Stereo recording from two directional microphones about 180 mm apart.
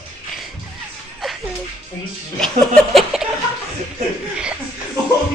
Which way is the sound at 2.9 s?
5° right (ahead or behind).